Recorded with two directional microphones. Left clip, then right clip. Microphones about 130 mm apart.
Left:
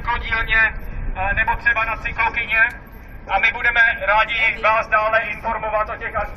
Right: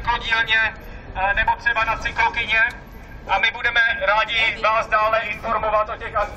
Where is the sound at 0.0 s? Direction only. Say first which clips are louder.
Right 2 dB; 40° right (ahead or behind); by 6.2 s 20° right (ahead or behind).